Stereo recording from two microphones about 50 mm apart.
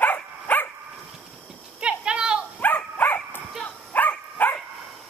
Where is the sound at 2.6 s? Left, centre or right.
Left.